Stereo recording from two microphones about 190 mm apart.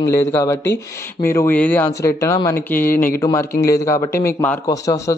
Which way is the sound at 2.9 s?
45° left (ahead or behind).